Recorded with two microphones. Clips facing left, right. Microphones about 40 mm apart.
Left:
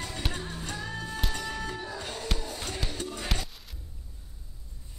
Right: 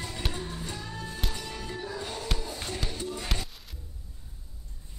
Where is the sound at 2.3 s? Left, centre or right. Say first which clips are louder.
Even; centre.